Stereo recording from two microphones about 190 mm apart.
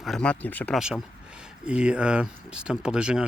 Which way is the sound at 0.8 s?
5° right (ahead or behind).